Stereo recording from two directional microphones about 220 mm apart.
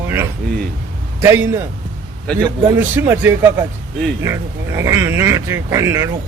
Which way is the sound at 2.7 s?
10° right (ahead or behind).